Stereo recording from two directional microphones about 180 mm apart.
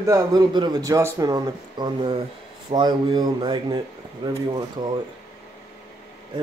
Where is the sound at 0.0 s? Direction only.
20° right (ahead or behind).